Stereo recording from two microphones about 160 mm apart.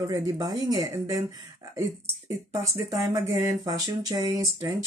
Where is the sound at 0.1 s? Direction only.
25° right (ahead or behind).